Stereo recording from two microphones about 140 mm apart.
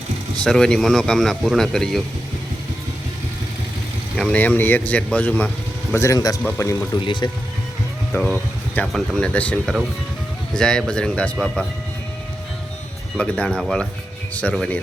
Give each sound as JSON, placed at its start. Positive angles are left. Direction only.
{"t": 0.4, "sound": "speech", "side_deg": 5}
{"t": 4.2, "sound": "speech", "side_deg": 10}
{"t": 5.9, "sound": "speech", "side_deg": 20}
{"t": 7.0, "sound": "speech", "side_deg": 35}
{"t": 8.1, "sound": "speech", "side_deg": 15}
{"t": 13.1, "sound": "speech", "side_deg": 10}